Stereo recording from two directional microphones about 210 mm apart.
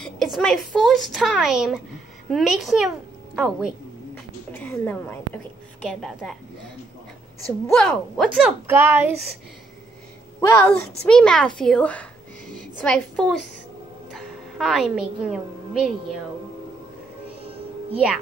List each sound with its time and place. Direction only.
0.0 s a woman's voice: centre (ahead or behind)
4.5 s a woman's voice: 10° left (ahead or behind)
7.7 s a woman's voice: centre (ahead or behind)
10.4 s a woman's voice: 10° left (ahead or behind)
17.4 s music: 25° right (ahead or behind)